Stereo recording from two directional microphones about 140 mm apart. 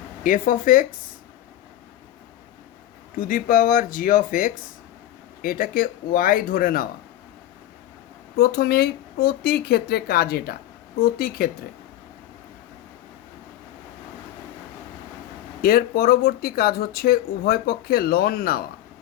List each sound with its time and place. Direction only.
0.2 s speech: 75° left (ahead or behind)
3.2 s speech: 80° left
5.4 s speech: 90° left
8.4 s speech: 90° left
15.6 s speech: 90° left